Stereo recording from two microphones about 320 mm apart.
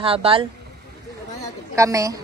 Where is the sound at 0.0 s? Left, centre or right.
Centre.